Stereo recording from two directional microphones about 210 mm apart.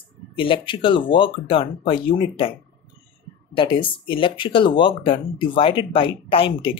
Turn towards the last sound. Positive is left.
turn(degrees=25)  # may be behind; listen again after turning